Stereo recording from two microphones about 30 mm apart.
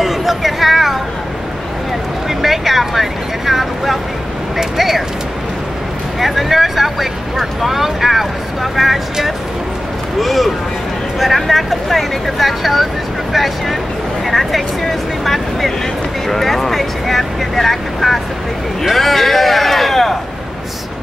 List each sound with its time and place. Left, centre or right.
0.0 s a sound: centre
2.2 s speech: centre
6.1 s speech: centre
10.2 s speech: centre